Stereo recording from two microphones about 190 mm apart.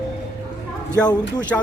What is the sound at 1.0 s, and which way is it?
Speech, 20° left (ahead or behind).